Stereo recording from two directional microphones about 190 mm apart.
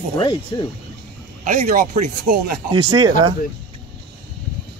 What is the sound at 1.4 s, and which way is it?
Speech, 50° right (ahead or behind).